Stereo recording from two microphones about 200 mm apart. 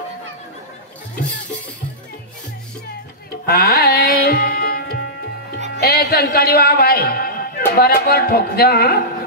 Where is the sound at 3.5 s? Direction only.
50° left (ahead or behind).